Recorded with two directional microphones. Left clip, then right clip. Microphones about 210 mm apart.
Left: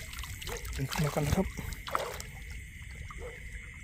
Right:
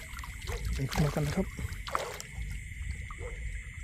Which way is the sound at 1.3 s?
10° left (ahead or behind).